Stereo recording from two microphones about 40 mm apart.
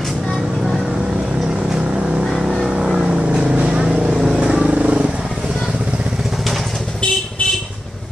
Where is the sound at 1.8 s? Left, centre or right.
Right.